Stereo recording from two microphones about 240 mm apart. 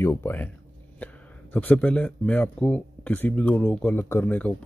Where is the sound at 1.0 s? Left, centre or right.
Centre.